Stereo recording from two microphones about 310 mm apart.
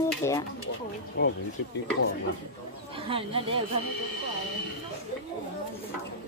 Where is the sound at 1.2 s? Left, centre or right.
Left.